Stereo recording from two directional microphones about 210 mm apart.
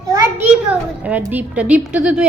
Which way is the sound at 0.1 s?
15° right (ahead or behind).